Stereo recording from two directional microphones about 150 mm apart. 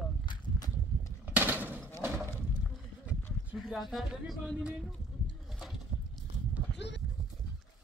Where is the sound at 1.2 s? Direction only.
10° right (ahead or behind).